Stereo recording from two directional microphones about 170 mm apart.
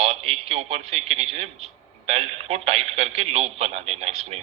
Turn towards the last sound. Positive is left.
turn(degrees=-35)  # may be behind; listen again after turning